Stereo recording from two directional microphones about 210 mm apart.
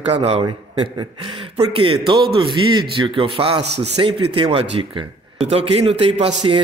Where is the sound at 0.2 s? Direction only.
30° right (ahead or behind).